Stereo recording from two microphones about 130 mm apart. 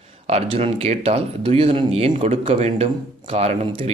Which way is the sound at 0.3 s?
50° right (ahead or behind).